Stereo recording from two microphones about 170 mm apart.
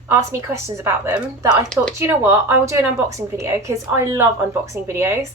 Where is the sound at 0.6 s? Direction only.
15° right (ahead or behind).